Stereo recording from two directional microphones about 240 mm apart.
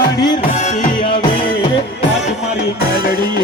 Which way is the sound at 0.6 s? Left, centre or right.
Left.